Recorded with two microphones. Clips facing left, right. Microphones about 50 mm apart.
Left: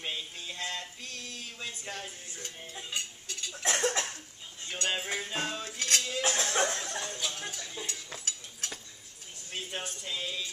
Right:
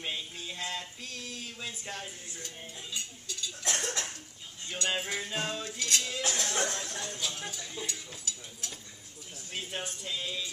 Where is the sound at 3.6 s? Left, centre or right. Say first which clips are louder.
Left 5 dB; left.